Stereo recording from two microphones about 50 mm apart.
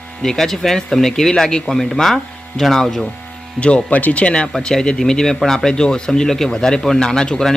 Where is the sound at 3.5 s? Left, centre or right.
Left.